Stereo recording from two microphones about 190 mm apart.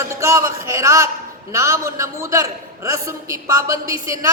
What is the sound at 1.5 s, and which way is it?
A man's voice, 15° right (ahead or behind).